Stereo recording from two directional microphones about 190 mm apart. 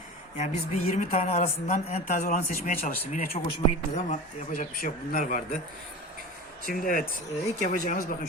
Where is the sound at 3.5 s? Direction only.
35° left (ahead or behind).